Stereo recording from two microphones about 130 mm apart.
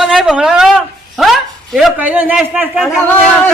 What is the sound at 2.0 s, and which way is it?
Speech, 15° right (ahead or behind).